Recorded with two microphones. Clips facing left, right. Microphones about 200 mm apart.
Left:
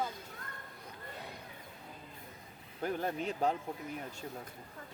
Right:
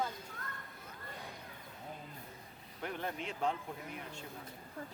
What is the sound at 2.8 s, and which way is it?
Speech, 40° left (ahead or behind).